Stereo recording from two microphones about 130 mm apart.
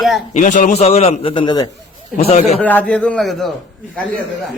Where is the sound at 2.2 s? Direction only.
55° left (ahead or behind).